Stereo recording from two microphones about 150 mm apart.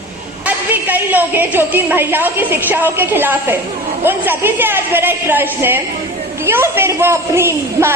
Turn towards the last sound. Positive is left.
turn(degrees=-15)  # may be behind; listen again after turning